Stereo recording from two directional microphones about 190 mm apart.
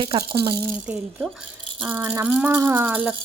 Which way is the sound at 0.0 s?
25° right (ahead or behind).